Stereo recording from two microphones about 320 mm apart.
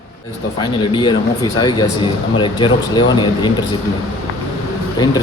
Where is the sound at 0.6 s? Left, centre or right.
Centre.